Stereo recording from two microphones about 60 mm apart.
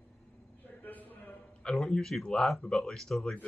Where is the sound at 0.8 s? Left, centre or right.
Left.